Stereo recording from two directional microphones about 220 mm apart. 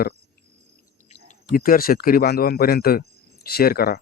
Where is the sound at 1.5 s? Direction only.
40° left (ahead or behind).